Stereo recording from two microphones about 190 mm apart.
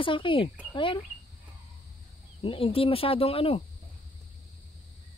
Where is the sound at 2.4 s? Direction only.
30° left (ahead or behind).